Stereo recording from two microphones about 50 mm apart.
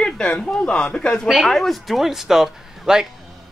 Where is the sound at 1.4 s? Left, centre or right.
Centre.